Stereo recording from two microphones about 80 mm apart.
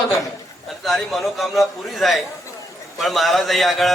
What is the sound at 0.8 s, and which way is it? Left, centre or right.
A man's voice, centre.